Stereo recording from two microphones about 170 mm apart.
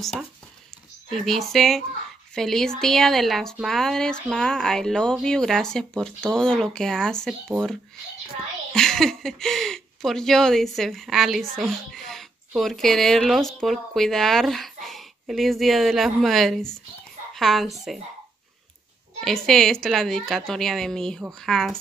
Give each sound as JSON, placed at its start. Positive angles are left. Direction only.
{"t": 1.1, "sound": "speech", "side_deg": 0}
{"t": 8.7, "sound": "a woman's voice", "side_deg": 5}
{"t": 19.2, "sound": "speech", "side_deg": 0}